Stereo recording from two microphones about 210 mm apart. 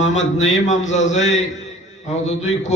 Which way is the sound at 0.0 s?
35° left (ahead or behind).